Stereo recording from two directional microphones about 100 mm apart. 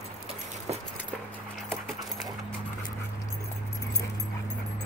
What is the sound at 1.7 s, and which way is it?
Dog, 5° left (ahead or behind).